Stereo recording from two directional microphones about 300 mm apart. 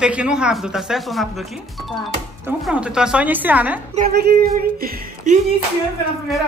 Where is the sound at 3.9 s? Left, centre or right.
Right.